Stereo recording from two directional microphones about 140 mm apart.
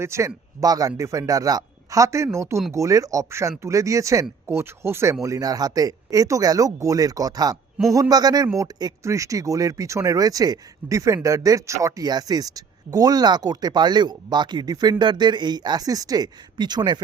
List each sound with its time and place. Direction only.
0.0 s speech: 20° right (ahead or behind)